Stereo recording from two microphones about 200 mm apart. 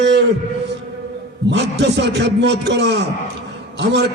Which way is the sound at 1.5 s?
60° right (ahead or behind).